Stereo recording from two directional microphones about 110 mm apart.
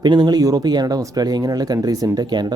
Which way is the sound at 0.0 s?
40° right (ahead or behind).